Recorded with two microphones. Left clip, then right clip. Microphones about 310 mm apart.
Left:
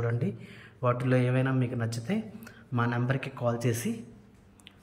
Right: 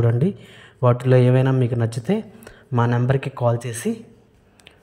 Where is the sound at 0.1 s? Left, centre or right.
Centre.